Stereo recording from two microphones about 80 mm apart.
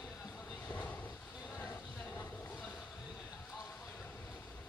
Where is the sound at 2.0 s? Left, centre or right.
Left.